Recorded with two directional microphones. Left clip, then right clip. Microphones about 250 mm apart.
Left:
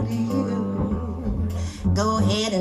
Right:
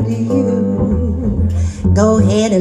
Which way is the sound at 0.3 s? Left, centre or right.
Right.